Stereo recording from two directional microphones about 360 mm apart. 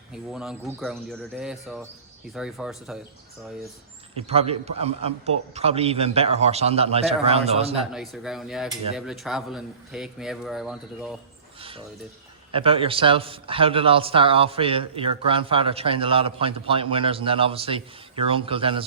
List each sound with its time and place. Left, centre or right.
0.1 s cutlery: centre
4.2 s a man's voice: centre
7.9 s cutlery: centre
12.5 s a man's voice: centre